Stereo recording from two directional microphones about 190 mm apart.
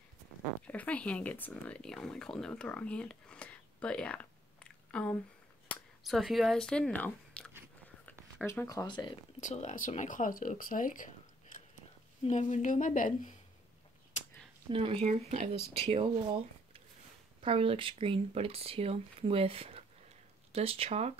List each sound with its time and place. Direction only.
0.7 s speech: 5° left (ahead or behind); by 9.2 s 25° left (ahead or behind)
9.4 s speech: 40° left (ahead or behind)
12.3 s a woman's voice: 35° left (ahead or behind)
14.7 s speech: 30° right (ahead or behind)
17.4 s speech: 30° right (ahead or behind)